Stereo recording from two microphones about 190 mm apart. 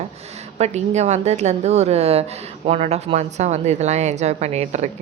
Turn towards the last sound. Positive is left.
turn(degrees=-35)  # may be behind; listen again after turning